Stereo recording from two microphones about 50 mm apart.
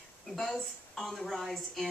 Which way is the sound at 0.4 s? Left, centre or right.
Centre.